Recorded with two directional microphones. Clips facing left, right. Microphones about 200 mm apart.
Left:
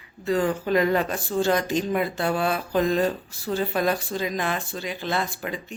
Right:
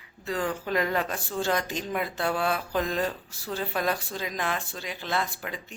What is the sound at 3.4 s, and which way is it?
Speech, 15° left (ahead or behind).